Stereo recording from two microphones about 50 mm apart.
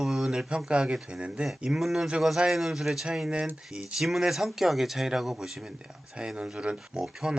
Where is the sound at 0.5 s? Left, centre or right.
Centre.